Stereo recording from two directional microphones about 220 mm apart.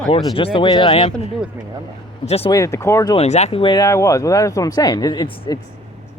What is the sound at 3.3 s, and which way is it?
Speech, 30° left (ahead or behind).